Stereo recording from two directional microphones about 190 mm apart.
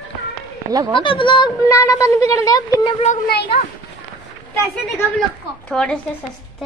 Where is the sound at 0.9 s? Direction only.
25° left (ahead or behind).